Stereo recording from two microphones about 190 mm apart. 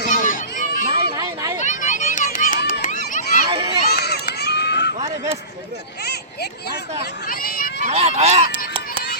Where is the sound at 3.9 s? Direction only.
55° left (ahead or behind).